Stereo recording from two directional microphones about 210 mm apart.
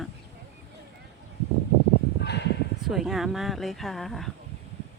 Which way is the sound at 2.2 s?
55° left (ahead or behind).